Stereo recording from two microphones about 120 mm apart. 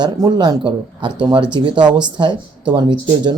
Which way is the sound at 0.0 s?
35° right (ahead or behind).